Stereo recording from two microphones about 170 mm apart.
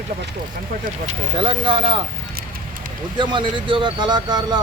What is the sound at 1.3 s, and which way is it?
Speech, 30° right (ahead or behind).